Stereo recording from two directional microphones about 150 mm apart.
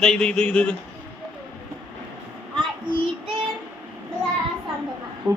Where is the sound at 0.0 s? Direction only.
5° left (ahead or behind).